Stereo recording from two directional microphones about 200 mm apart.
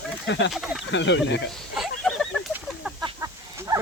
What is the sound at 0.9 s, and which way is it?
Speech, 65° left (ahead or behind).